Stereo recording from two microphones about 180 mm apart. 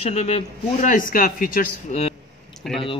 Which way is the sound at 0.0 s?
35° left (ahead or behind).